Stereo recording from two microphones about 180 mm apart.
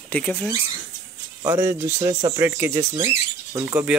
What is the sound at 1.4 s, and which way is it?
Speech, 15° right (ahead or behind).